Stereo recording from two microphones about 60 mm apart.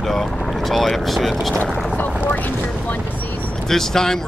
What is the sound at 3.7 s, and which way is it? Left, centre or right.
Speech, centre.